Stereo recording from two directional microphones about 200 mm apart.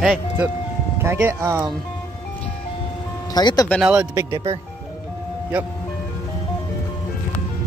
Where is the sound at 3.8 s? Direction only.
5° right (ahead or behind).